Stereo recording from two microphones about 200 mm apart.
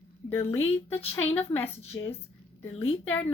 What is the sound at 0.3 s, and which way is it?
Speech, 10° left (ahead or behind).